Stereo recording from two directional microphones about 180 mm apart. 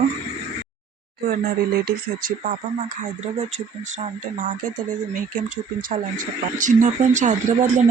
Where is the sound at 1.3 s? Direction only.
55° right (ahead or behind).